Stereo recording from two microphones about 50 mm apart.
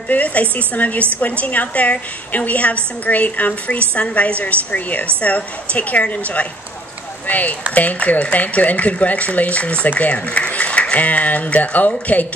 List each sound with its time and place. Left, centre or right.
0.1 s a woman's voice: left